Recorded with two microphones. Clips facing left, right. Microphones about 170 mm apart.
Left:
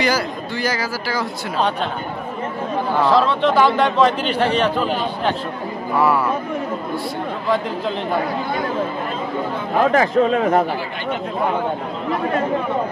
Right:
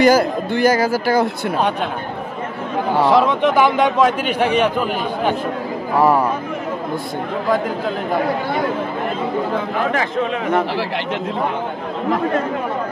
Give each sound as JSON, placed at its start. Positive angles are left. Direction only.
{"t": 0.0, "sound": "speech", "side_deg": -50}
{"t": 3.0, "sound": "a man's voice", "side_deg": -15}
{"t": 5.9, "sound": "speech", "side_deg": -40}
{"t": 9.9, "sound": "speech", "side_deg": 35}